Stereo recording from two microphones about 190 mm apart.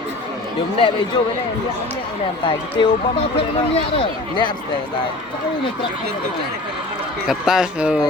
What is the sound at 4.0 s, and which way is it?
Speech, 25° left (ahead or behind).